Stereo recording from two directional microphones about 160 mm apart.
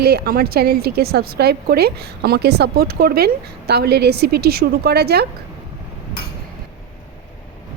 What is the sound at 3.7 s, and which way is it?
A woman's voice, 90° right.